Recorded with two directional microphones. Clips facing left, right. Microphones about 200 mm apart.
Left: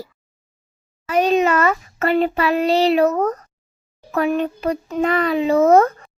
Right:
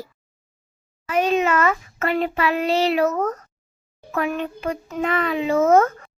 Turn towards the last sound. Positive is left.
turn(degrees=35)  # may be behind; listen again after turning